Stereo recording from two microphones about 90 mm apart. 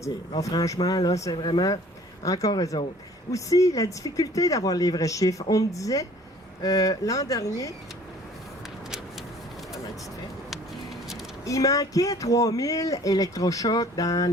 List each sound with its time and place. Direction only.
0.0 s speech: 40° left (ahead or behind)
1.4 s speech: 60° left (ahead or behind)
2.2 s speech: 40° left (ahead or behind)
10.5 s a sound: centre (ahead or behind)
11.4 s speech: 40° left (ahead or behind)